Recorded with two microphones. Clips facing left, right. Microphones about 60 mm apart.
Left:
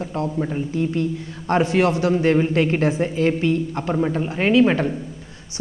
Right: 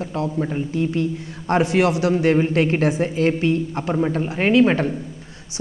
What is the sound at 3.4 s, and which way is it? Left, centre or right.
Speech, right.